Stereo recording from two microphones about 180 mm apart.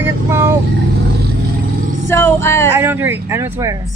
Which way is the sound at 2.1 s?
15° left (ahead or behind).